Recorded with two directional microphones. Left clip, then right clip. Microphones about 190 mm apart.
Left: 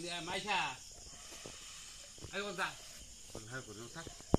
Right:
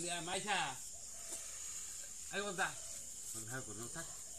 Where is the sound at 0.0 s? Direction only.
25° right (ahead or behind).